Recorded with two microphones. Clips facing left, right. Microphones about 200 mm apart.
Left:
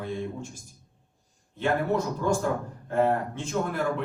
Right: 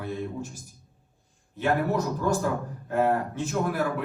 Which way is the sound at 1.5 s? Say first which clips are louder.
Even; 10° right (ahead or behind).